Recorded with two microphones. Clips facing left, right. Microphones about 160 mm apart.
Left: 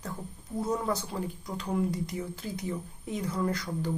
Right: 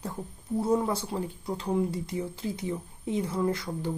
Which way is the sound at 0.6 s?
25° right (ahead or behind).